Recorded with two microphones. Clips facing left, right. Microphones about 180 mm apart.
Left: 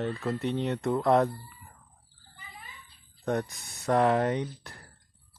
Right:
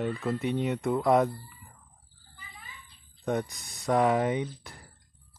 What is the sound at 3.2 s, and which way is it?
Speech, centre (ahead or behind).